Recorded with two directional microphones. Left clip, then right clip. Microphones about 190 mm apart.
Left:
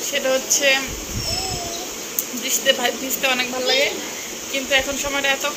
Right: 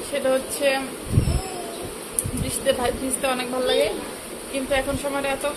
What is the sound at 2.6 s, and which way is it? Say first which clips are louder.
Speech: left 2 dB; 5° right (ahead or behind).